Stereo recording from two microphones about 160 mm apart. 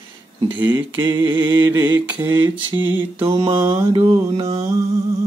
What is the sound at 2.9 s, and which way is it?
Mantra, 15° right (ahead or behind).